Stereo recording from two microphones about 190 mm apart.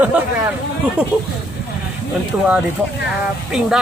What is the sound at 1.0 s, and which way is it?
Speech, 5° right (ahead or behind).